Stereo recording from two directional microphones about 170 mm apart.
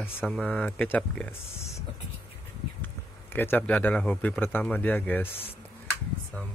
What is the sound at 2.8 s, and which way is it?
Speech, 10° left (ahead or behind).